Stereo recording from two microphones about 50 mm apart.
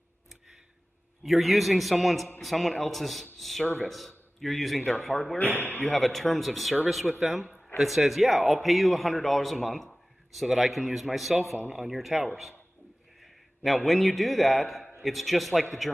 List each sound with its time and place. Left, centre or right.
1.2 s a man's voice: centre
3.6 s a man's voice: left
3.9 s speech: centre
5.4 s speech: left
5.9 s a man's voice: centre
9.8 s a man's voice: centre